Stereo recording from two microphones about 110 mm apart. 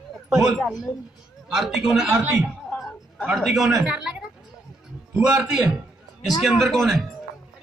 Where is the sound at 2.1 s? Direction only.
20° right (ahead or behind).